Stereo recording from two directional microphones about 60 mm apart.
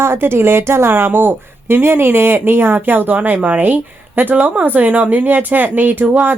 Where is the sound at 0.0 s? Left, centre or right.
Right.